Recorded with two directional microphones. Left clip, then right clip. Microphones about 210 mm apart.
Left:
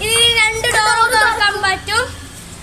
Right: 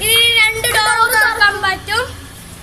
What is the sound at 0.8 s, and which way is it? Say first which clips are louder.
Music: even; 15° left (ahead or behind).